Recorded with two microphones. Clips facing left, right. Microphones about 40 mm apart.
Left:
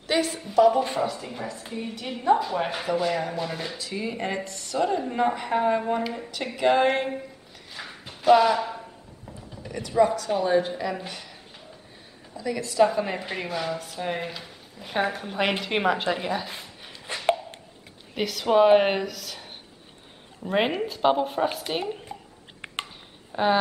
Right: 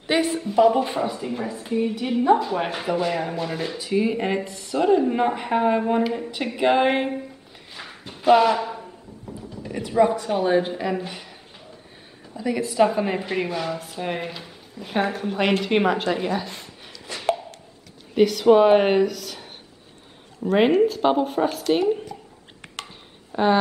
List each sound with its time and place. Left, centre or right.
0.0 s speech: centre
3.7 s speech: centre
7.7 s a sound: centre
8.3 s speech: centre
9.6 s speech: centre
12.4 s a woman's voice: centre
18.1 s speech: centre
23.3 s speech: centre